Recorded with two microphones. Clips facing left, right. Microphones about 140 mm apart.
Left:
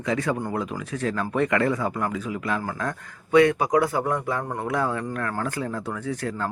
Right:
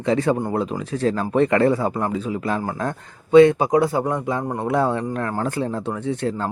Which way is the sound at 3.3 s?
25° right (ahead or behind).